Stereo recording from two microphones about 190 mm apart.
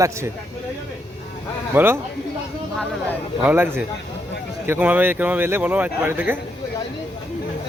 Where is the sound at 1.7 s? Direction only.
10° right (ahead or behind).